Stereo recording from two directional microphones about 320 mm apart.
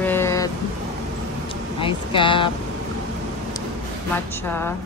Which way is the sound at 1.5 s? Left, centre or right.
Centre.